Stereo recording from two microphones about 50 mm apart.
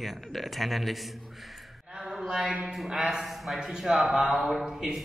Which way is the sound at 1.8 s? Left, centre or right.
Centre.